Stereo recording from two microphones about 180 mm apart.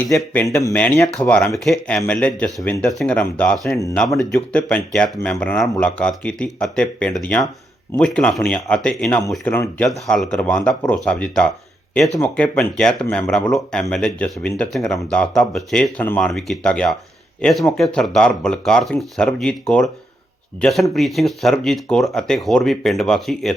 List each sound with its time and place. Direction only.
0.1 s speech: 15° left (ahead or behind)